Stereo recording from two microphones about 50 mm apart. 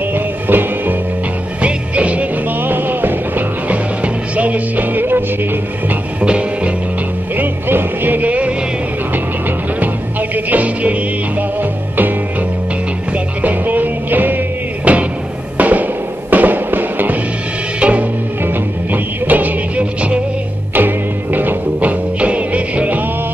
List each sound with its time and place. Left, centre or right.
0.1 s music: right
1.6 s music: right
2.6 s music: right
6.2 s music: right
7.3 s music: right
10.3 s music: right
13.4 s music: right
14.9 s music: right
17.7 s music: right
18.4 s music: right
20.7 s music: right